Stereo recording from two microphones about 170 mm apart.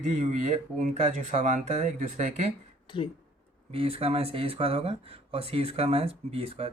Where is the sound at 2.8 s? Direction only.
30° left (ahead or behind).